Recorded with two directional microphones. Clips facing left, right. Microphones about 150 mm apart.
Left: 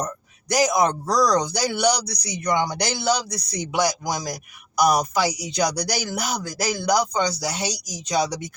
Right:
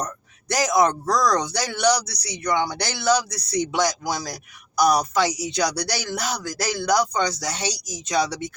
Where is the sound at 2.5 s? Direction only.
15° left (ahead or behind).